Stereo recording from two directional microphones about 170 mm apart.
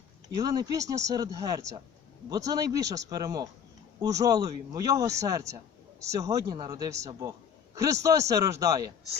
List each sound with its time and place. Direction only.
0.3 s speech: 20° right (ahead or behind)